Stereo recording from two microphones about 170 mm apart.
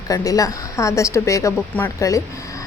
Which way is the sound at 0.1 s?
20° left (ahead or behind).